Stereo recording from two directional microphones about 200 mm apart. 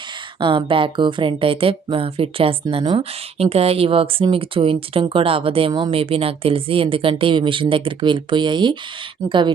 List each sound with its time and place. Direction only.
0.3 s speech: 25° right (ahead or behind)